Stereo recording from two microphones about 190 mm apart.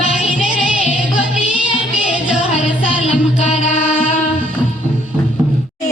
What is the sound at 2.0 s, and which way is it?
Music, 5° right (ahead or behind).